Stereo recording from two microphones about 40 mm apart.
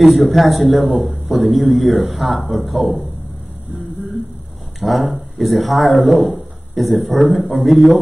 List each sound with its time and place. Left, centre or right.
0.0 s a man's voice: centre
4.7 s a man's voice: centre